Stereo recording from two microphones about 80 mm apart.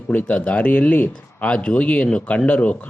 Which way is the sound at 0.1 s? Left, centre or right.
Centre.